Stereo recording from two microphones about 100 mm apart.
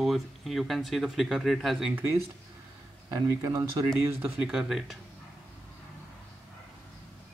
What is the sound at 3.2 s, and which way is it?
Speech, 35° right (ahead or behind).